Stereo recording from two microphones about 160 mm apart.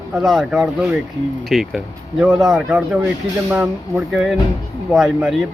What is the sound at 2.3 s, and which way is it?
Speech, 25° right (ahead or behind).